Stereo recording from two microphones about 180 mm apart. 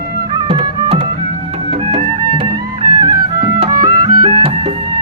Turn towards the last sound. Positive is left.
turn(degrees=-25)  # may be behind; listen again after turning